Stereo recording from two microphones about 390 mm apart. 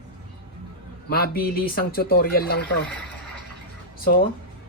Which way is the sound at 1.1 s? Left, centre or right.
Left.